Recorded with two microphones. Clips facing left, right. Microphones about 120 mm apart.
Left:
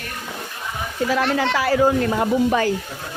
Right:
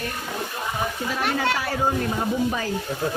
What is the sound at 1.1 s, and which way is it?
Speech, 90° left.